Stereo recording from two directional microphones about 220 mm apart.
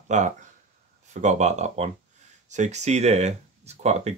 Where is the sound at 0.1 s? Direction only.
35° right (ahead or behind).